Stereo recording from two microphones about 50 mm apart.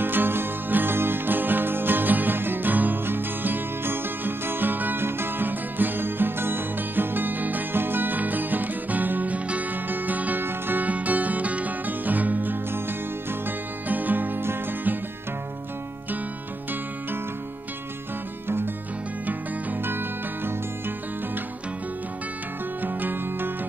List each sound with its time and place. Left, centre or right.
0.0 s music: right
13.8 s music: right
19.8 s music: right
22.8 s music: right